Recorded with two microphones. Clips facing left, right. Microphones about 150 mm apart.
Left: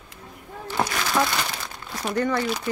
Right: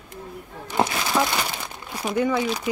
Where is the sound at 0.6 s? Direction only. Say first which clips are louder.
Right 2 dB; 20° right (ahead or behind).